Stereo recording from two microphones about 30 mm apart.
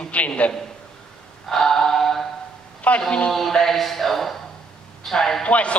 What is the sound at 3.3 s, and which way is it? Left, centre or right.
Speech, centre.